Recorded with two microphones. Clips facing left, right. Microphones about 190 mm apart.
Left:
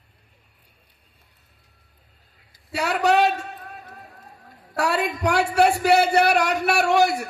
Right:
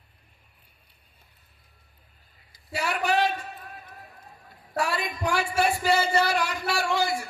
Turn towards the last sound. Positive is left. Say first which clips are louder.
# left 7 dB
turn(degrees=65)  # may be behind; listen again after turning